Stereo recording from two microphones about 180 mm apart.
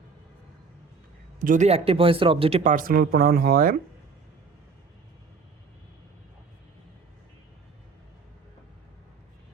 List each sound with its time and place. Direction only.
1.4 s speech: 40° right (ahead or behind)
2.7 s speech: 50° right (ahead or behind)